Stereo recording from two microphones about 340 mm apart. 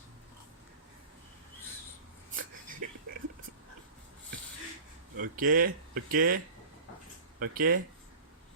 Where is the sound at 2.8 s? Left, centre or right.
Right.